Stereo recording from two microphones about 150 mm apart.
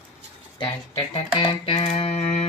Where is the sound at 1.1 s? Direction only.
30° left (ahead or behind).